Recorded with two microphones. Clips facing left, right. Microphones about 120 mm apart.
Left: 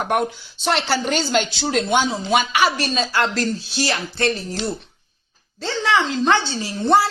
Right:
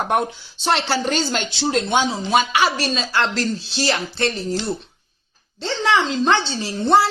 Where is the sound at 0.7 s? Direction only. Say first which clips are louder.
Even; 35° right (ahead or behind).